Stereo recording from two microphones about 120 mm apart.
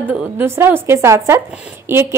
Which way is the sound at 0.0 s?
15° right (ahead or behind).